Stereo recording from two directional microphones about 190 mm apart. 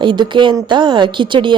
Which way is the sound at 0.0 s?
25° right (ahead or behind).